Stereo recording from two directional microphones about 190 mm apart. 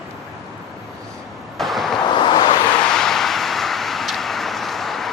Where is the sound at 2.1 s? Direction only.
25° left (ahead or behind).